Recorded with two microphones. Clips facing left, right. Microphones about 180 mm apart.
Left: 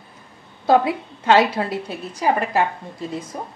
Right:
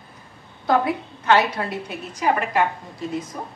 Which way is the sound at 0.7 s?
25° left (ahead or behind).